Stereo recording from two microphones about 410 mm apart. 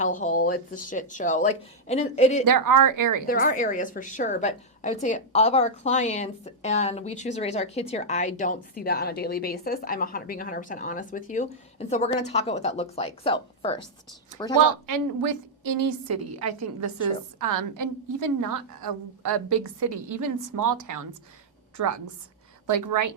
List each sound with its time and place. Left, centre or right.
0.0 s a woman's voice: centre
2.4 s a woman's voice: right
3.2 s a woman's voice: centre
14.6 s a woman's voice: right
16.0 s a woman's voice: right